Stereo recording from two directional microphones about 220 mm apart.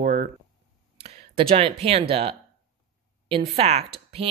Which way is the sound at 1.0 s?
25° right (ahead or behind).